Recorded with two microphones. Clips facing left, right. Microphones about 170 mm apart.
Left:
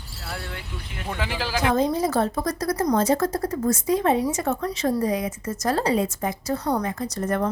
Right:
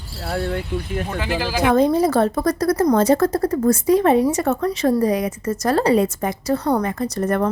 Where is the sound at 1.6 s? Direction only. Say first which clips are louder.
Right 6 dB; 65° right (ahead or behind).